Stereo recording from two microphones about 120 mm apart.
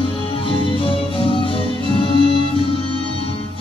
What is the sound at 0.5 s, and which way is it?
Music, 50° left (ahead or behind).